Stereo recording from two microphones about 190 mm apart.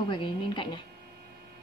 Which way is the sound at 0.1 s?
25° left (ahead or behind).